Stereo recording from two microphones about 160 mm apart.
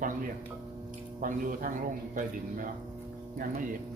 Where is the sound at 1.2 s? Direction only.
60° right (ahead or behind).